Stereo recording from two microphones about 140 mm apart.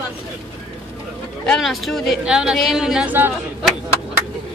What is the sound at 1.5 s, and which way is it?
Speech, centre (ahead or behind).